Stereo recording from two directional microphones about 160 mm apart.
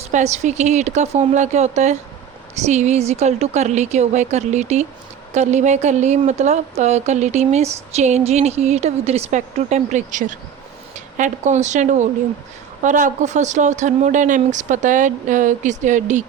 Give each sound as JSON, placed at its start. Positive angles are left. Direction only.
{"t": 0.0, "sound": "a woman's voice", "side_deg": -45}